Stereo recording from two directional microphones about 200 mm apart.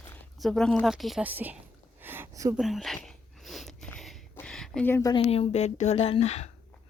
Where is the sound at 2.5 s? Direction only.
Centre (ahead or behind); by 6.5 s 35° left (ahead or behind).